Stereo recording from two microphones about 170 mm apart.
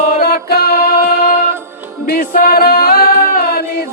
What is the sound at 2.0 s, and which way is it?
Music, 60° left (ahead or behind).